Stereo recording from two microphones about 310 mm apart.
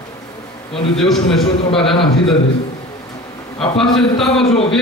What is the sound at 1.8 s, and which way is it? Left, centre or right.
Speech, centre.